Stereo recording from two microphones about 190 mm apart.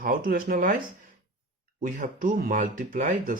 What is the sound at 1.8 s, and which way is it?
Speech, 45° right (ahead or behind).